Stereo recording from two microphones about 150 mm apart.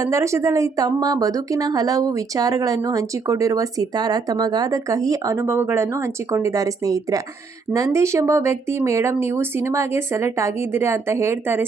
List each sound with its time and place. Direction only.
0.0 s a woman's voice: 20° right (ahead or behind)